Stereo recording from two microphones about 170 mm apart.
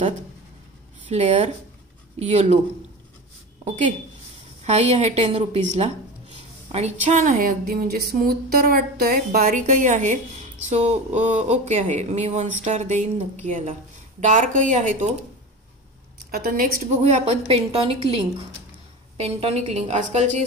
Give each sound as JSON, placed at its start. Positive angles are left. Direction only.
{"t": 1.0, "sound": "speech", "side_deg": -40}
{"t": 3.6, "sound": "a woman's voice", "side_deg": -40}
{"t": 16.3, "sound": "a woman's voice", "side_deg": -65}
{"t": 17.0, "sound": "speech", "side_deg": -40}